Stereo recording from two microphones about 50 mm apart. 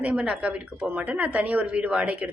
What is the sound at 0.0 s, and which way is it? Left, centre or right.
Speech, right.